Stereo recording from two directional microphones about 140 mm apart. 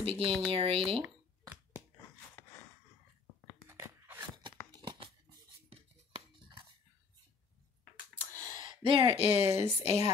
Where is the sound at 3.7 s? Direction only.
15° right (ahead or behind).